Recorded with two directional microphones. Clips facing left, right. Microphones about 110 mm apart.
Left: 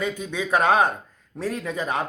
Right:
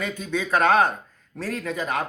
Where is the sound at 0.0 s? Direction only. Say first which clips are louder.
Even; 15° left (ahead or behind).